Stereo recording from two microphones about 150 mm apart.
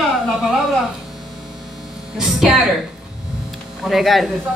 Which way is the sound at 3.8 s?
Centre (ahead or behind).